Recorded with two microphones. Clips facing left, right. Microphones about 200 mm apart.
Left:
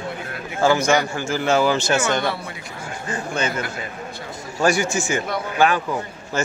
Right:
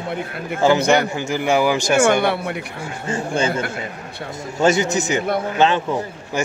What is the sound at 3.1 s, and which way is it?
A man's voice, 25° right (ahead or behind).